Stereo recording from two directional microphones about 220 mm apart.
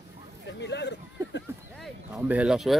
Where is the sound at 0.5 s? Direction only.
50° left (ahead or behind).